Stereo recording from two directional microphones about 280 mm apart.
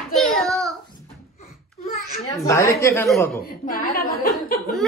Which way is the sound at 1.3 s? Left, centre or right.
Left.